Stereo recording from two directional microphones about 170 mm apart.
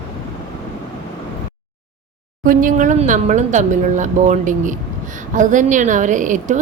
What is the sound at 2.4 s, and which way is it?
A woman's voice, 50° right (ahead or behind).